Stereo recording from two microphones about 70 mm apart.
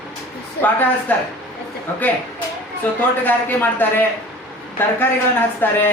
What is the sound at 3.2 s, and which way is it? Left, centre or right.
Speech, left.